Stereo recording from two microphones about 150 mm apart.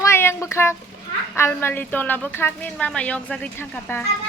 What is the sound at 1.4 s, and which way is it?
A woman's voice, 15° left (ahead or behind).